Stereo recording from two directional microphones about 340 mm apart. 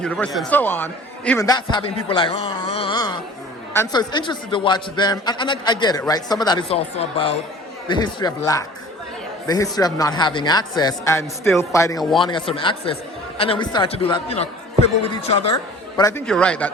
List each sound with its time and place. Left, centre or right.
0.0 s a man's voice: centre
2.0 s a sound: centre
3.8 s a man's voice: centre